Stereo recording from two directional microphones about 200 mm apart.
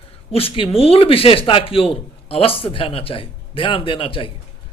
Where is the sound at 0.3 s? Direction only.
25° left (ahead or behind).